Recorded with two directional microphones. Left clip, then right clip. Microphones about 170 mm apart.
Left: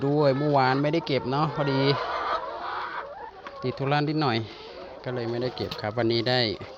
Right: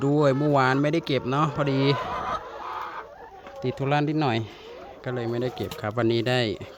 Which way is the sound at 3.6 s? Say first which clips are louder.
Right 1 dB; 35° right (ahead or behind).